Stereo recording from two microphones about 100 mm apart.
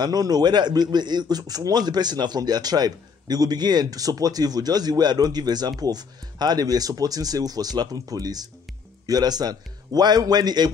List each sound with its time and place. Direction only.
0.0 s a man's voice: 40° right (ahead or behind)